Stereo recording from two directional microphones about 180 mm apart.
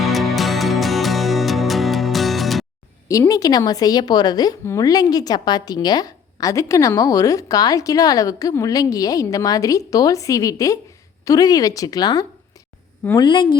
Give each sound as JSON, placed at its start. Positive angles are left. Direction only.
{"t": 0.0, "sound": "music", "side_deg": 0}
{"t": 3.1, "sound": "a woman's voice", "side_deg": 20}